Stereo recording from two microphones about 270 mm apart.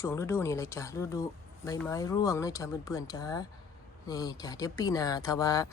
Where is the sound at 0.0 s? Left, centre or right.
Centre.